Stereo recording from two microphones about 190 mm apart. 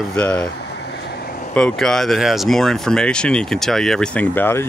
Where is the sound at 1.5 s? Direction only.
5° left (ahead or behind).